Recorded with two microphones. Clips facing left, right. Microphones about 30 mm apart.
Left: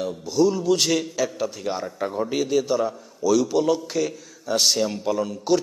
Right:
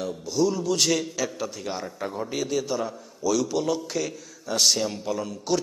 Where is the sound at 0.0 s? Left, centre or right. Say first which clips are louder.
Left 4 dB; centre.